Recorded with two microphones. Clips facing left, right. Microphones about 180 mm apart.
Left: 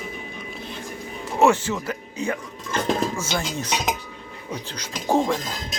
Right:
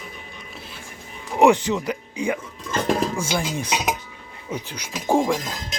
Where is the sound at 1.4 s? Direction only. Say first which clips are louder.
Right 2 dB; 15° right (ahead or behind).